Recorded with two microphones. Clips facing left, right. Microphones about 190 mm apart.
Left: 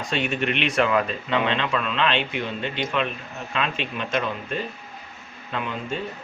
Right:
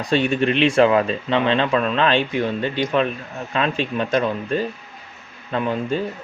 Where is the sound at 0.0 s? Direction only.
35° right (ahead or behind).